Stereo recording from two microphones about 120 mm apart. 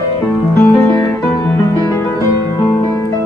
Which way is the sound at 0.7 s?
15° left (ahead or behind).